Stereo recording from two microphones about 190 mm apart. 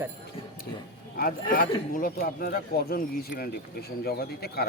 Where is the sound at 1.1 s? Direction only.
50° left (ahead or behind).